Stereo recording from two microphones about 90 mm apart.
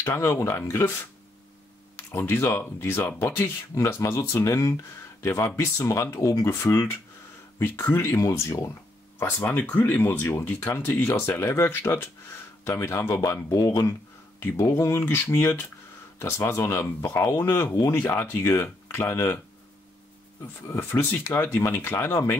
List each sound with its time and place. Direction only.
0.0 s speech: 30° left (ahead or behind)
2.1 s speech: 30° left (ahead or behind)
10.2 s speech: 30° left (ahead or behind)
16.8 s speech: 20° left (ahead or behind)
17.2 s speech: 30° left (ahead or behind)
21.0 s speech: 25° left (ahead or behind)